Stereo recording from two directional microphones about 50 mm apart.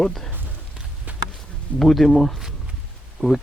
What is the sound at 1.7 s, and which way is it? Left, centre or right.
Speech, centre.